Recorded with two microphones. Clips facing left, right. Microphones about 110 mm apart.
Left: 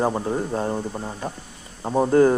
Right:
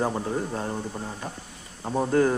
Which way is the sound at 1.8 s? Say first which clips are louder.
Left 5 dB; 25° left (ahead or behind).